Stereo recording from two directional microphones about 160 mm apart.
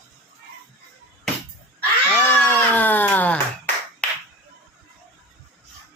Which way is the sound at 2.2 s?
10° left (ahead or behind).